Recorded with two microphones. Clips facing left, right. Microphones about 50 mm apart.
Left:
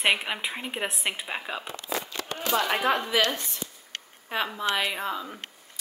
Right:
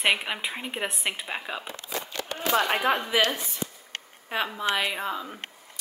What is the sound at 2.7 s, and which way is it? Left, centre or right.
Speech, centre.